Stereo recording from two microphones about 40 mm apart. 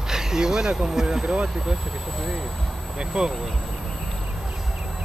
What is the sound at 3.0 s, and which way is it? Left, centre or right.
Speech, centre.